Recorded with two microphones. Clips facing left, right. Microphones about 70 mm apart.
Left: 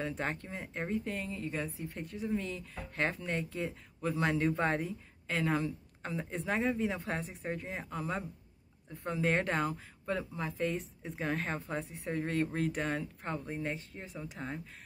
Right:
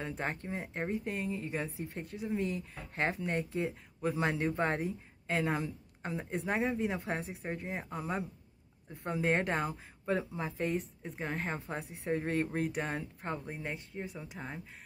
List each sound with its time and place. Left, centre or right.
0.0 s a woman's voice: centre
0.4 s speech: centre
2.0 s speech: centre
2.4 s speech: right
4.4 s a woman's voice: centre
4.7 s a woman's voice: centre
10.0 s speech: right
10.7 s a woman's voice: centre
11.5 s speech: centre
12.7 s speech: centre